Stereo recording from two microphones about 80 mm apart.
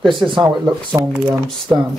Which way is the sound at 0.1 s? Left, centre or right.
Right.